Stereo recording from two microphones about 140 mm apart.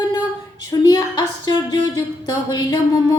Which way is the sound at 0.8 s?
30° left (ahead or behind).